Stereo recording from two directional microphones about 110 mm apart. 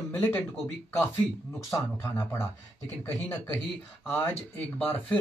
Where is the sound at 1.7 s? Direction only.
25° left (ahead or behind).